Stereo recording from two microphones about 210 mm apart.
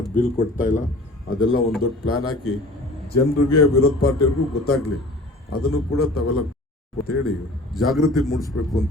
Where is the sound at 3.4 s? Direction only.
90° left.